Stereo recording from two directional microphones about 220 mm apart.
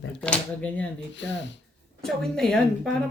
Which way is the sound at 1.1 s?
55° left (ahead or behind).